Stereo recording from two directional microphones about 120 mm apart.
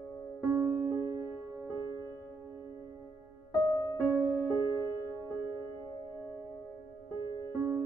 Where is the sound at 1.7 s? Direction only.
30° right (ahead or behind).